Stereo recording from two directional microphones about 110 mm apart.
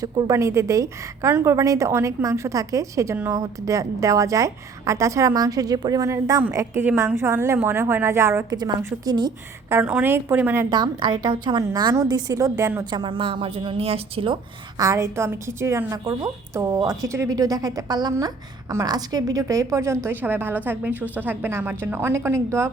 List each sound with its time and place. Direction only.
0.0 s a woman's voice: 30° right (ahead or behind)
8.4 s a woman's voice: 35° right (ahead or behind)
9.6 s a woman's voice: 25° right (ahead or behind)
10.7 s a woman's voice: 35° right (ahead or behind)
12.8 s speech: 45° right (ahead or behind); by 14.3 s 60° right (ahead or behind)
14.8 s a woman's voice: 30° right (ahead or behind)